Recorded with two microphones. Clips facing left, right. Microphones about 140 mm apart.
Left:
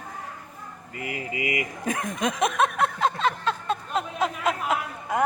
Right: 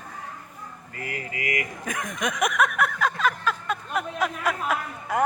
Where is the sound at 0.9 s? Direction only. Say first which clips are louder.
Left 3 dB; 20° left (ahead or behind).